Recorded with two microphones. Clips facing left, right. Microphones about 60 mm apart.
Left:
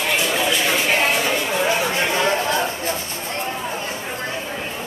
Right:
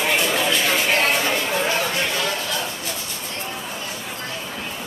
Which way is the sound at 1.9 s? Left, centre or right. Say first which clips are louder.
Left 4 dB; left.